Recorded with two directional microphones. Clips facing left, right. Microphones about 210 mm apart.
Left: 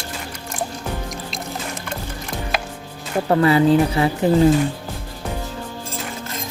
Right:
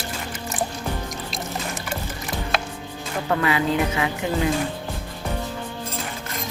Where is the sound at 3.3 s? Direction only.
35° left (ahead or behind).